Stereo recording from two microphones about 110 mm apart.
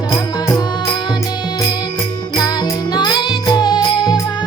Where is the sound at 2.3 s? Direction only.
40° left (ahead or behind).